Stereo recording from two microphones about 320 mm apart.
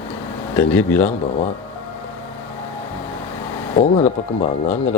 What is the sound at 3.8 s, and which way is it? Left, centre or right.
Speech, left.